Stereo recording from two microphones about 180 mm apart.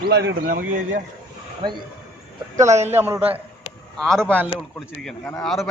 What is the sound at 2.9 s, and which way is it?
Speech, 10° right (ahead or behind).